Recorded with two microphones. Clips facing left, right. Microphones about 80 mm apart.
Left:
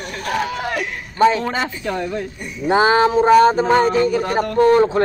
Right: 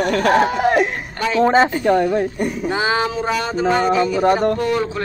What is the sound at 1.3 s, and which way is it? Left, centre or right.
Speech, right.